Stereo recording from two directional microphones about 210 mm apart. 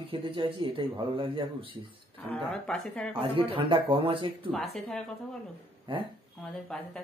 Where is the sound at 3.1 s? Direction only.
25° right (ahead or behind).